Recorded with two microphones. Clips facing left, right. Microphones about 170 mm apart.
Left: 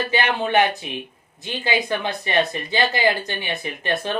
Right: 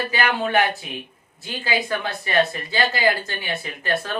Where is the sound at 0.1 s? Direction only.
25° left (ahead or behind).